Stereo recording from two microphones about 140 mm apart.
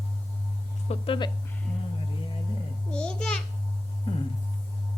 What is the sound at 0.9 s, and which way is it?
Speech, 50° left (ahead or behind).